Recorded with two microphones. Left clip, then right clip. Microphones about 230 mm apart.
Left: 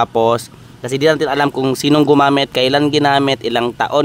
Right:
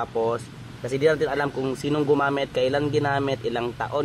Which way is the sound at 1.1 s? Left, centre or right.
Left.